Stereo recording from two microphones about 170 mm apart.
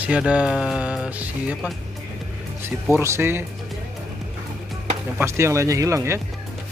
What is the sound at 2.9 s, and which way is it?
Speech, 15° right (ahead or behind).